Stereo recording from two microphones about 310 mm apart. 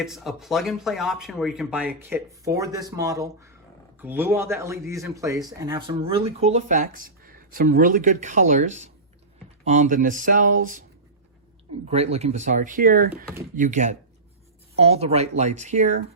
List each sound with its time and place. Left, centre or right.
0.0 s a man's voice: centre; by 10.5 s right
11.9 s speech: centre